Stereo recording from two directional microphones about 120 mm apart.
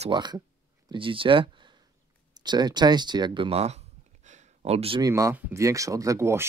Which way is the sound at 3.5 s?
60° right (ahead or behind).